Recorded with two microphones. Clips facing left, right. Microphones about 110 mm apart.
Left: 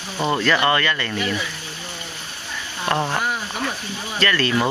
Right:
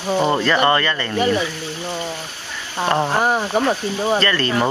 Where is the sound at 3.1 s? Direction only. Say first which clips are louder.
Right 7 dB; 40° right (ahead or behind).